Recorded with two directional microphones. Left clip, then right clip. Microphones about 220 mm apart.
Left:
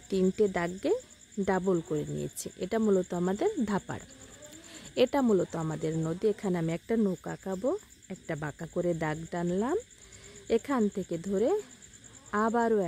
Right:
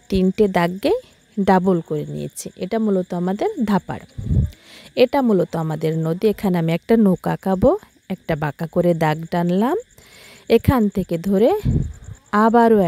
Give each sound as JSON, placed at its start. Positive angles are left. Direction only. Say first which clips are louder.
{"t": 0.1, "sound": "a woman's voice", "louder": "right 9 dB", "side_deg": -35}